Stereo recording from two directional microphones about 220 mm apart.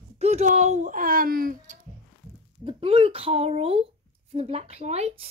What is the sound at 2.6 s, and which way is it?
Speech, 25° right (ahead or behind).